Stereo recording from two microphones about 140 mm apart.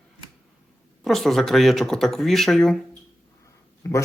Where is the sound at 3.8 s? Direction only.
20° left (ahead or behind).